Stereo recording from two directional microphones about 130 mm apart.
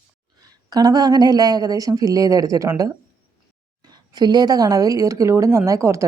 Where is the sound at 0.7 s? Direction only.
30° right (ahead or behind).